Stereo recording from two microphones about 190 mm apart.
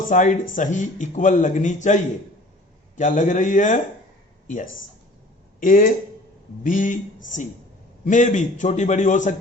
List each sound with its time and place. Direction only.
0.1 s a man's voice: 40° left (ahead or behind)
5.5 s speech: 45° left (ahead or behind)
8.0 s a man's voice: 40° left (ahead or behind)